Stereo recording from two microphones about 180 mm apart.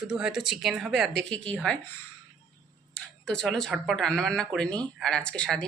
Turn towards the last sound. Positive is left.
turn(degrees=5)  # may be behind; listen again after turning